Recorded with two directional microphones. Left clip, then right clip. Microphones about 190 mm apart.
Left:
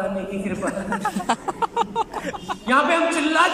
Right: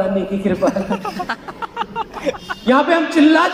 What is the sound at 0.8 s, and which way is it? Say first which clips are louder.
Speech: right 2 dB; 15° right (ahead or behind).